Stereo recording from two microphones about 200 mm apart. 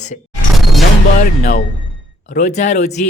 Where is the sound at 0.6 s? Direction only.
Centre (ahead or behind).